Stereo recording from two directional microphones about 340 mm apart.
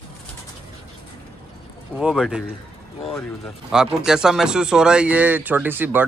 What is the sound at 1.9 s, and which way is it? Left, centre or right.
Speech, centre.